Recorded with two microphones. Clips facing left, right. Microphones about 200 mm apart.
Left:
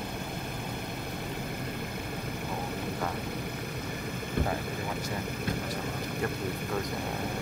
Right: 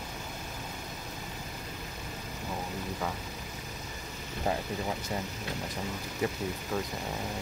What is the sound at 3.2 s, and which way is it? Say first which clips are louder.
Vehicle: left 7 dB; 60° left (ahead or behind).